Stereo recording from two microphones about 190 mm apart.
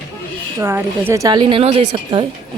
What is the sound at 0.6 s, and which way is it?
A woman's voice, 10° right (ahead or behind).